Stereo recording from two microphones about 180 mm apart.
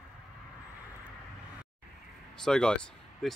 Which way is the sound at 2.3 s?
5° left (ahead or behind).